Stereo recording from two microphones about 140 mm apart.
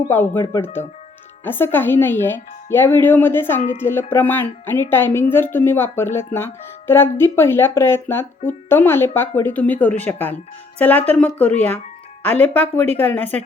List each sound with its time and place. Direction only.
0.1 s speech: 15° left (ahead or behind)